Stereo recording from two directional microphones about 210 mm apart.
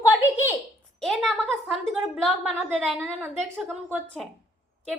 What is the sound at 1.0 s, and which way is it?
A woman's voice, centre (ahead or behind).